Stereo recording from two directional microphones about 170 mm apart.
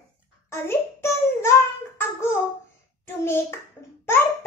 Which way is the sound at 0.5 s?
15° left (ahead or behind).